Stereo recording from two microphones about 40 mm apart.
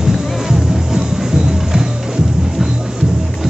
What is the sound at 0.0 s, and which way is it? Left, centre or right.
Music, centre.